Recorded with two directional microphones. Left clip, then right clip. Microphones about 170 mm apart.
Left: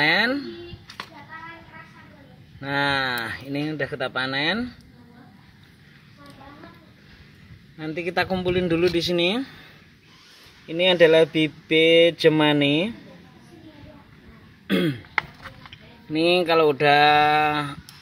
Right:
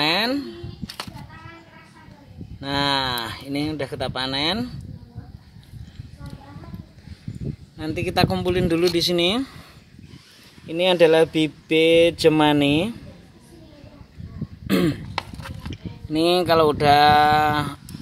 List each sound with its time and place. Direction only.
0.0 s speech: 10° right (ahead or behind)
2.6 s speech: 10° right (ahead or behind)
7.7 s speech: 15° right (ahead or behind)
10.7 s speech: 15° right (ahead or behind)
14.7 s throat clearing: 25° right (ahead or behind)
15.7 s speech: 15° right (ahead or behind)